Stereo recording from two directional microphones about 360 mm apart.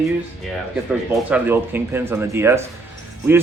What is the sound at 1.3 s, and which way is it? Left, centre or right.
A man's voice, centre.